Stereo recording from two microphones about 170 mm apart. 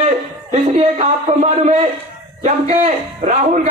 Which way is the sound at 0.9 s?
40° right (ahead or behind).